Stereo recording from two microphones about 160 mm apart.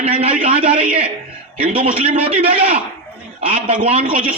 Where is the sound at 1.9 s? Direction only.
10° right (ahead or behind).